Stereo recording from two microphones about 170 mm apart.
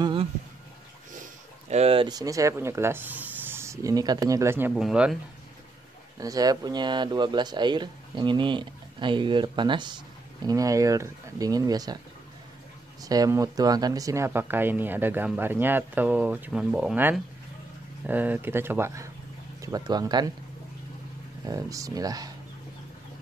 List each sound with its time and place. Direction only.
0.0 s a sound: 30° right (ahead or behind)
1.1 s speech: 45° right (ahead or behind); by 5.1 s 5° right (ahead or behind)
6.1 s speech: 20° right (ahead or behind)
13.0 s speech: 20° right (ahead or behind)
21.5 s speech: 20° right (ahead or behind)